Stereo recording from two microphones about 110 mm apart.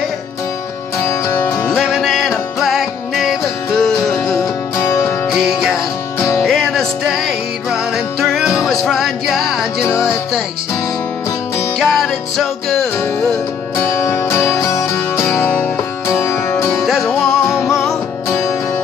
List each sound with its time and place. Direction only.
1.0 s music: 25° left (ahead or behind)
1.7 s music: centre (ahead or behind)
4.7 s music: 25° left (ahead or behind)
5.2 s music: centre (ahead or behind)
6.1 s music: 25° left (ahead or behind)
6.4 s music: 5° left (ahead or behind)
11.8 s music: centre (ahead or behind)
13.7 s music: 25° left (ahead or behind)
16.8 s music: centre (ahead or behind)